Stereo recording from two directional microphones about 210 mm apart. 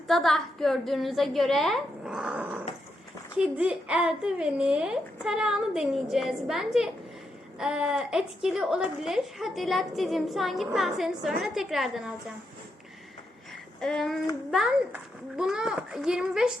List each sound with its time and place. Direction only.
0.1 s a woman's voice: centre (ahead or behind)
13.8 s a woman's voice: centre (ahead or behind)